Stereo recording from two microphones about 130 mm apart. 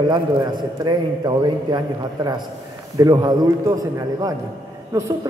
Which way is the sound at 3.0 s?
30° right (ahead or behind).